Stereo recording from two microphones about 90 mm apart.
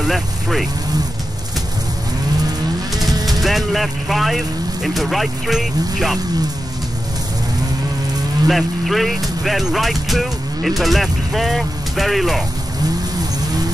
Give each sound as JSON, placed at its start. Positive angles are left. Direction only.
{"t": 0.0, "sound": "speech", "side_deg": 0}
{"t": 3.0, "sound": "vehicle", "side_deg": -45}
{"t": 3.3, "sound": "speech", "side_deg": 0}
{"t": 8.5, "sound": "speech", "side_deg": 0}